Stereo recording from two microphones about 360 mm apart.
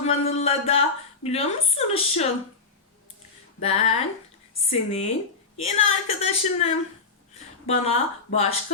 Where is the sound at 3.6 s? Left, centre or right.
Centre.